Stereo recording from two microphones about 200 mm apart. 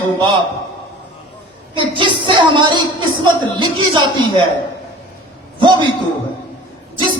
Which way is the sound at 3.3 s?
25° right (ahead or behind).